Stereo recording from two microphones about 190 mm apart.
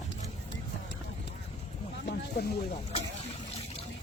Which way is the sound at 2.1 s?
65° left (ahead or behind).